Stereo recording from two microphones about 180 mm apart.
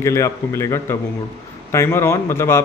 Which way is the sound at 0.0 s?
15° left (ahead or behind).